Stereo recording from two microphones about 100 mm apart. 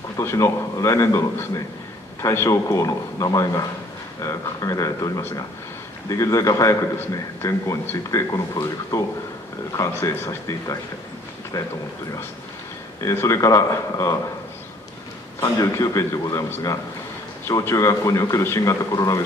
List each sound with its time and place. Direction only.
0.2 s a man's voice: 25° left (ahead or behind)
11.5 s a man's voice: 35° left (ahead or behind)
13.1 s a man's voice: 30° left (ahead or behind)
15.4 s a man's voice: 35° left (ahead or behind)